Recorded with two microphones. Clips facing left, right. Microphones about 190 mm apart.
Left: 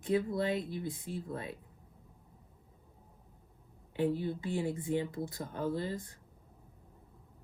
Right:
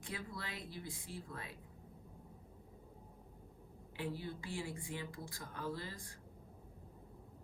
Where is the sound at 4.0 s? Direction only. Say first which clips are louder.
Left 11 dB; 50° left (ahead or behind).